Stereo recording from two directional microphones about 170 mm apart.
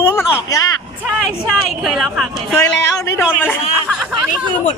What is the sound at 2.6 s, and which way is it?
Speech, 15° left (ahead or behind).